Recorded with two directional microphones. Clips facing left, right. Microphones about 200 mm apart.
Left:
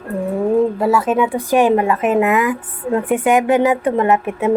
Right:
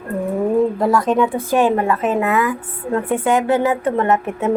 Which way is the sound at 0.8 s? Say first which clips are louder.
Even; 5° left (ahead or behind).